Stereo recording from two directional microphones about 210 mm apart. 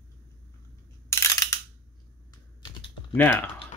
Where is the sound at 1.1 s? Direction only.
15° left (ahead or behind).